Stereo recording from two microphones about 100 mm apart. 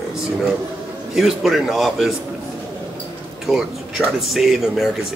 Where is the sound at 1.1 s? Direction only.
5° right (ahead or behind).